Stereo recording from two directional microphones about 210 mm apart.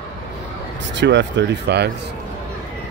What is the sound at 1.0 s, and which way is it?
Speech, 60° right (ahead or behind).